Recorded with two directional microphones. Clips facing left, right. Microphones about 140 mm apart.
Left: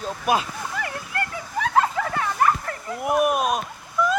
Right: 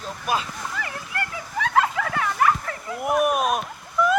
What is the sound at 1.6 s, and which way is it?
Vehicle, 30° left (ahead or behind).